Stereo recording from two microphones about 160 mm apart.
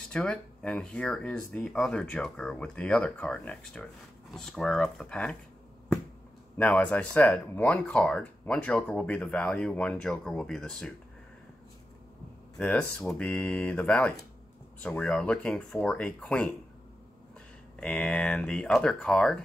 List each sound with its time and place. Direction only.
0.1 s speech: 5° left (ahead or behind)
6.5 s speech: 10° left (ahead or behind)
12.5 s speech: 5° left (ahead or behind)
17.7 s speech: 5° left (ahead or behind)